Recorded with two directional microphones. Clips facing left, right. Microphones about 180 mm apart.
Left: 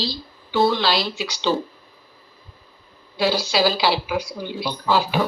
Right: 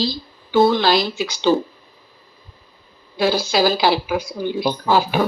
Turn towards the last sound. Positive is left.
turn(degrees=-50)  # may be behind; listen again after turning